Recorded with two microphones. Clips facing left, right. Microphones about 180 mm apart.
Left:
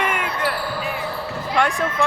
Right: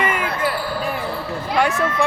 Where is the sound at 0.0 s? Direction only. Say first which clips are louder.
Right 2 dB; centre (ahead or behind).